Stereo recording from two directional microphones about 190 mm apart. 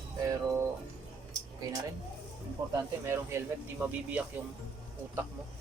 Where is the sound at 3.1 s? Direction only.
15° right (ahead or behind).